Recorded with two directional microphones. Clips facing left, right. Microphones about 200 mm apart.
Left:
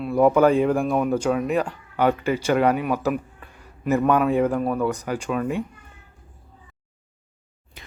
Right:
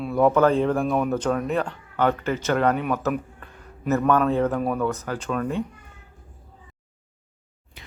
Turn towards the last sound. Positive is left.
turn(degrees=45)  # may be behind; listen again after turning